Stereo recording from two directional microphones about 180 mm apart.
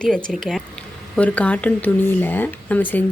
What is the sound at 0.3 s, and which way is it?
Speech, centre (ahead or behind).